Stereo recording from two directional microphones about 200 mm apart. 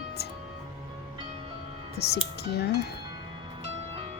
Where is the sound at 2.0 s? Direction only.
55° left (ahead or behind).